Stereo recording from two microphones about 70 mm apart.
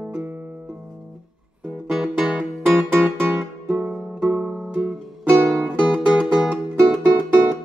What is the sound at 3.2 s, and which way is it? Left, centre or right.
Music, right.